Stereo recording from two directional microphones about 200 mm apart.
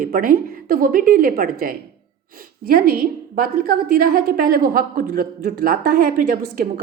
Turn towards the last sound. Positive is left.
turn(degrees=-45)  # may be behind; listen again after turning